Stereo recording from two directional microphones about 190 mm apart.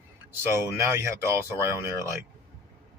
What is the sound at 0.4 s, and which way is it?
Speech, 15° right (ahead or behind).